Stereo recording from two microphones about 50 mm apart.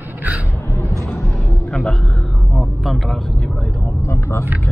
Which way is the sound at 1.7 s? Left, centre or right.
Centre.